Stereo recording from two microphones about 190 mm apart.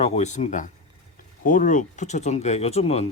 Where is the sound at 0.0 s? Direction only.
40° left (ahead or behind).